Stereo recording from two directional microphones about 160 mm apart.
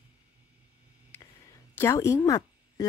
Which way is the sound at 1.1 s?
15° left (ahead or behind).